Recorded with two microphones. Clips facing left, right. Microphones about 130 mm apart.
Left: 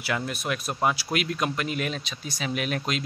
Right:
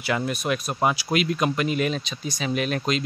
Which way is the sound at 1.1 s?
Centre (ahead or behind).